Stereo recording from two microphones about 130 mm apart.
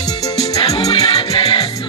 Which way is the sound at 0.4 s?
50° left (ahead or behind).